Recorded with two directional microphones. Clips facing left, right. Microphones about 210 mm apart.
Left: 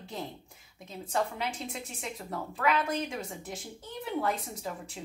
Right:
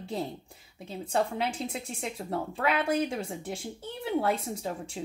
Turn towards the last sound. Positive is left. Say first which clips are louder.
# right 3 dB
turn(degrees=-30)  # may be behind; listen again after turning